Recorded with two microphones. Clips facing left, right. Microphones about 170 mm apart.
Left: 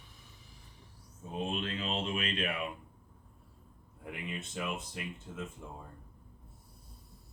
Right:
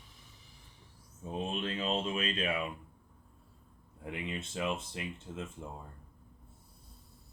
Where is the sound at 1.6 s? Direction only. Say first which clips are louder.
Right 2 dB; 30° right (ahead or behind).